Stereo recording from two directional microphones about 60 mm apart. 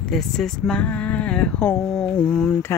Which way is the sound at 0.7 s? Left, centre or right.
Left.